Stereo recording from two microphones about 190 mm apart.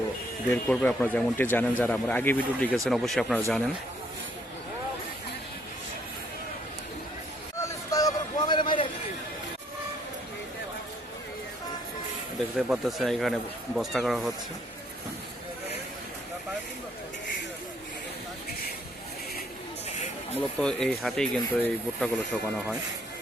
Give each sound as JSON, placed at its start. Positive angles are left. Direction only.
{"t": 0.5, "sound": "speech", "side_deg": 5}
{"t": 7.6, "sound": "a sound", "side_deg": 20}
{"t": 12.5, "sound": "speech", "side_deg": 0}
{"t": 20.3, "sound": "speech", "side_deg": 5}